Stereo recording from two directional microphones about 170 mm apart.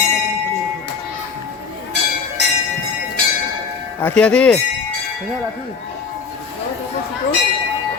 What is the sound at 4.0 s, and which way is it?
Bell, 5° left (ahead or behind).